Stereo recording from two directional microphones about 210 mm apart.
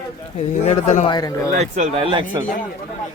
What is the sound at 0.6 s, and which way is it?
Speech, 35° left (ahead or behind).